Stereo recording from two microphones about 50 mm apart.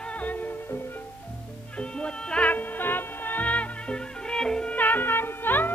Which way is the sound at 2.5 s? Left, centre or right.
Left.